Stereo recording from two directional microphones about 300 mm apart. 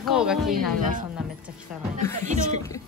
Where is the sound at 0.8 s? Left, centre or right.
Right.